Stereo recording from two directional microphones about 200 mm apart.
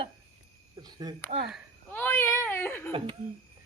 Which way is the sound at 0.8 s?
20° right (ahead or behind).